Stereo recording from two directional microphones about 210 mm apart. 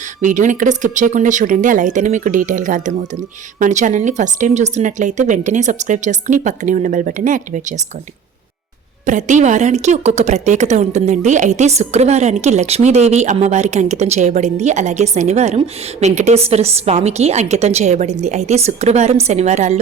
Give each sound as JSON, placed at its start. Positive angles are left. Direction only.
{"t": 0.2, "sound": "a woman's voice", "side_deg": -35}
{"t": 9.0, "sound": "a woman's voice", "side_deg": -35}